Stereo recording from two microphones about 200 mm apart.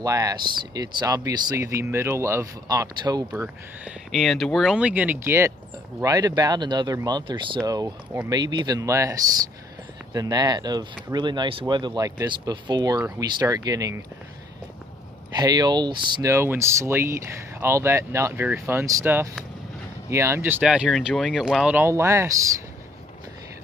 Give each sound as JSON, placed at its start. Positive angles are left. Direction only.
{"t": 0.0, "sound": "speech", "side_deg": -15}
{"t": 3.8, "sound": "speech", "side_deg": 0}
{"t": 15.3, "sound": "speech", "side_deg": -20}